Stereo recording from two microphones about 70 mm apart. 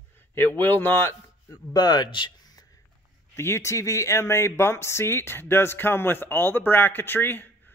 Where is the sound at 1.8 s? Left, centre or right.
Left.